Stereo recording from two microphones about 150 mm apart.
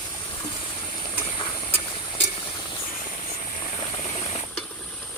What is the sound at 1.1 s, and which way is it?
Steam, 35° left (ahead or behind).